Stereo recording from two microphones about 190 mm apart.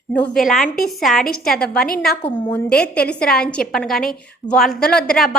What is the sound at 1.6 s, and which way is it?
Speech, 50° left (ahead or behind).